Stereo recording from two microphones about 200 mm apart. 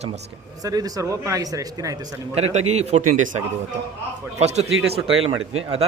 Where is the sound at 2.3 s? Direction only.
35° right (ahead or behind).